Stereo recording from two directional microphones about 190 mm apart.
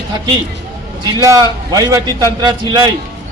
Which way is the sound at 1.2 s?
20° right (ahead or behind).